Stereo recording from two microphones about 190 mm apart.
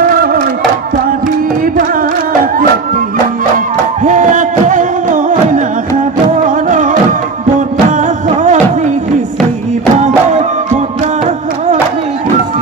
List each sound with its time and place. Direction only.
0.0 s music: 50° right (ahead or behind)
1.8 s music: 45° right (ahead or behind)
3.5 s music: 45° right (ahead or behind)
9.9 s music: 35° right (ahead or behind)